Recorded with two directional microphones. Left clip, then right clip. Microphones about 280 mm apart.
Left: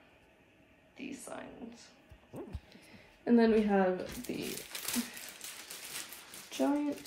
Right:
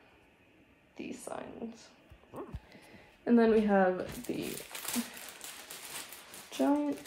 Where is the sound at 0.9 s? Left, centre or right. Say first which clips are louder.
Right 3 dB; right.